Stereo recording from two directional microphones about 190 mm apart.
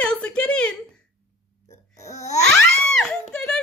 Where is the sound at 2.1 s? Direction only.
35° left (ahead or behind).